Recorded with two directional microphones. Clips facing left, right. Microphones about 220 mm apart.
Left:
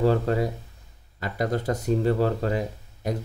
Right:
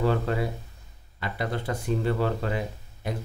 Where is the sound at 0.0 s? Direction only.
40° left (ahead or behind).